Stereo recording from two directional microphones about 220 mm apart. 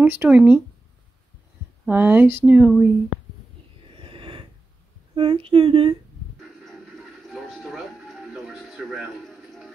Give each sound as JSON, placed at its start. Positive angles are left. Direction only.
{"t": 0.0, "sound": "speech", "side_deg": -5}
{"t": 1.9, "sound": "speech", "side_deg": -5}
{"t": 3.9, "sound": "a sound", "side_deg": -25}
{"t": 5.1, "sound": "speech", "side_deg": -25}
{"t": 6.6, "sound": "music", "side_deg": 0}